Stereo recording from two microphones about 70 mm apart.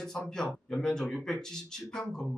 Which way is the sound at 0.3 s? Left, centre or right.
Centre.